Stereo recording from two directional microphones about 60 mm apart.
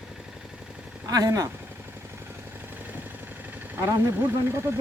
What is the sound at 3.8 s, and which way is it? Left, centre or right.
Speech, right.